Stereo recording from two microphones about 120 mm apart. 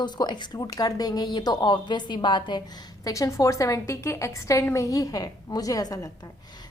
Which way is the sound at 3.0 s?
30° left (ahead or behind).